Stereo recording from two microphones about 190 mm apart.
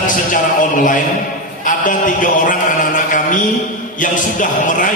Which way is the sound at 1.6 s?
45° left (ahead or behind).